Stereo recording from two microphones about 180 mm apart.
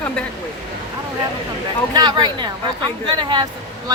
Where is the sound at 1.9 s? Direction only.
20° right (ahead or behind).